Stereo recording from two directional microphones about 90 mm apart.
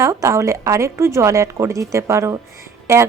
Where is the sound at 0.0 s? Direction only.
35° right (ahead or behind).